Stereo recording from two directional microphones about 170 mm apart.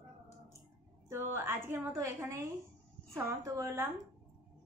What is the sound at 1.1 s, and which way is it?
A woman's voice, 15° right (ahead or behind).